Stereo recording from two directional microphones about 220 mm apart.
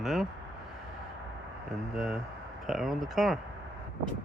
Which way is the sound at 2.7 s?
Centre (ahead or behind).